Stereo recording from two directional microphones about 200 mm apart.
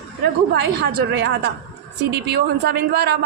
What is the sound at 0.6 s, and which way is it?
Speech, 50° right (ahead or behind).